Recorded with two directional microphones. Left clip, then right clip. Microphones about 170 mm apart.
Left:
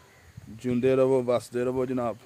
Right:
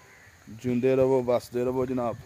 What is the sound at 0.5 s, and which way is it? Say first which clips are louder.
Speech: even; 5° right (ahead or behind).